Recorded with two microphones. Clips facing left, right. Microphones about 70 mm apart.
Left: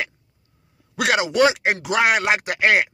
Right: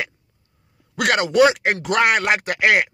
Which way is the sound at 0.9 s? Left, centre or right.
Centre.